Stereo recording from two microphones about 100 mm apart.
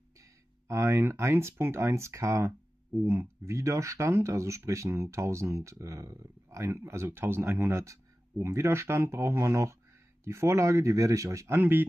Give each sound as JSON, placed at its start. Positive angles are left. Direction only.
{"t": 0.2, "sound": "speech", "side_deg": -30}